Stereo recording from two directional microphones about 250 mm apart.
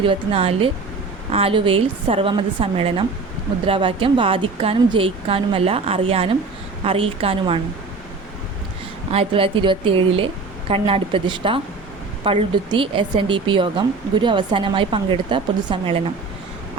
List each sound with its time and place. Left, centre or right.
0.0 s speech: right
9.1 s speech: right